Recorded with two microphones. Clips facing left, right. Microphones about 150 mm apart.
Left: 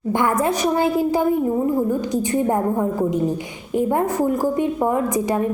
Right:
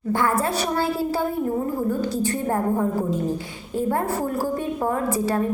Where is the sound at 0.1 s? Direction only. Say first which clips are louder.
Left 3 dB; 20° left (ahead or behind).